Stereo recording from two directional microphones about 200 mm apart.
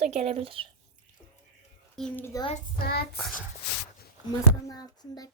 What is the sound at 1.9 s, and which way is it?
Speech, 5° left (ahead or behind).